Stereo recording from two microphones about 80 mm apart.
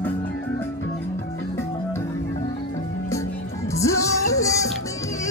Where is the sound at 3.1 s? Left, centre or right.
Left.